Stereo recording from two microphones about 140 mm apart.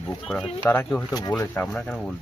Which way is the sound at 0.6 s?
15° left (ahead or behind).